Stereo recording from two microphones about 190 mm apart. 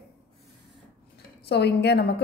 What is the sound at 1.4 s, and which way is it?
Speech, 60° left (ahead or behind).